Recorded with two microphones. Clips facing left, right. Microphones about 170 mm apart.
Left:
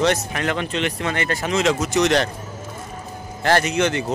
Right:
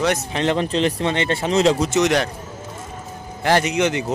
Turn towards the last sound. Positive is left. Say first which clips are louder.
# right 1 dB
turn(degrees=-15)  # may be behind; listen again after turning